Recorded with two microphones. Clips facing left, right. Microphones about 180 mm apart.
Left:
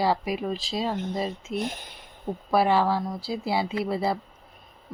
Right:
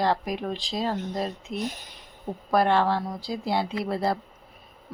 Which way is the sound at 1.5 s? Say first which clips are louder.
Left 1 dB; 55° left (ahead or behind).